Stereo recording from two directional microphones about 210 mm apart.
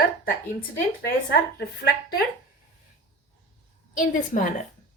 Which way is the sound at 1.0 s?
50° left (ahead or behind).